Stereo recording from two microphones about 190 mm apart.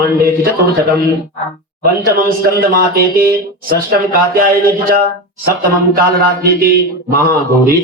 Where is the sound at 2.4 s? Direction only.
50° right (ahead or behind).